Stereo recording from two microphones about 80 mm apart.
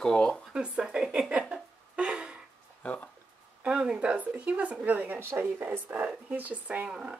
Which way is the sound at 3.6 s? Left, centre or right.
Centre.